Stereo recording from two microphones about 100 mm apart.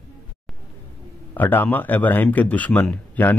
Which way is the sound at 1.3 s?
20° left (ahead or behind).